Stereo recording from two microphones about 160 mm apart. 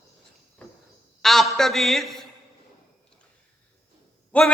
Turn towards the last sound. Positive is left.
turn(degrees=10)  # may be behind; listen again after turning